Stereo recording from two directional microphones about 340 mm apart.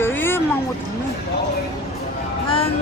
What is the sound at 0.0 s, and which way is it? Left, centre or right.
Music, centre.